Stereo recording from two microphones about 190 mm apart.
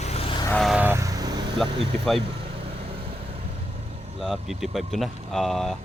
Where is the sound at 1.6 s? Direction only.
Centre (ahead or behind).